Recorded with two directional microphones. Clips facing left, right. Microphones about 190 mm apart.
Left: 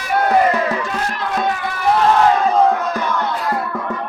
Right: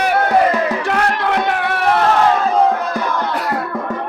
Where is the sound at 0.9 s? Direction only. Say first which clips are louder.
Right 5 dB; 70° right (ahead or behind).